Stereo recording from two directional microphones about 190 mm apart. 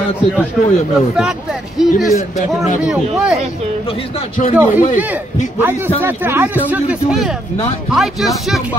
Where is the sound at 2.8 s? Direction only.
5° right (ahead or behind).